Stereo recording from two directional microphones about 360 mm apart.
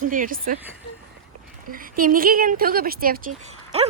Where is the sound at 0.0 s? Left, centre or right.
Right.